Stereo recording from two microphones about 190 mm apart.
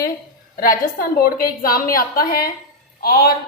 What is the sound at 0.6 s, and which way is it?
A woman's voice, 50° left (ahead or behind).